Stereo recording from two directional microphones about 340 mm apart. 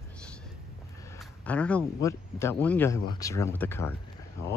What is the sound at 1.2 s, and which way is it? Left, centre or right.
Speech, centre.